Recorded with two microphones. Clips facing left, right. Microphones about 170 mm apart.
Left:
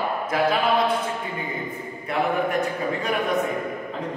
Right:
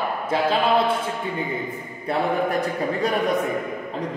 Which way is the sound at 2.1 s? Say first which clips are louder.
Right 1 dB; 35° right (ahead or behind).